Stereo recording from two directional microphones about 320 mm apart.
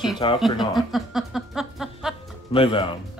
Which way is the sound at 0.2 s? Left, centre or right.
Centre.